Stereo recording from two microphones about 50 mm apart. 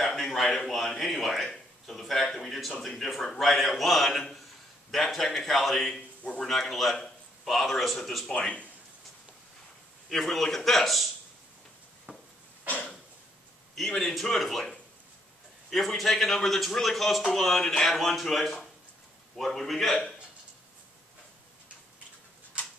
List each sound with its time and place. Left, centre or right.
0.0 s a man's voice: centre
8.4 s speech: left
10.0 s a man's voice: centre
12.1 s a sound: right
13.7 s a man's voice: centre